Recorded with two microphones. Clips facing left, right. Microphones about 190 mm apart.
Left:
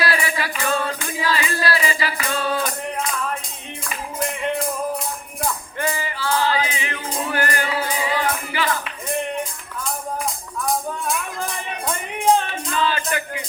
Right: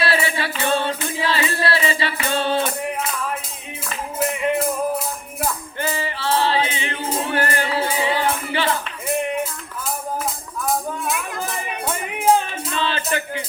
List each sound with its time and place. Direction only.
0.0 s music: 25° right (ahead or behind)
4.2 s music: 5° right (ahead or behind)
5.8 s music: 30° right (ahead or behind)
9.0 s music: 5° right (ahead or behind)
12.7 s music: 30° right (ahead or behind)